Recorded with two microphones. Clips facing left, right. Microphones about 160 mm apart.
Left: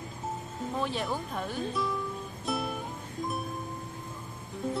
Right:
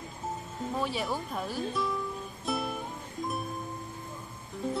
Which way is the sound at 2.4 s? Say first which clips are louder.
Even; centre (ahead or behind).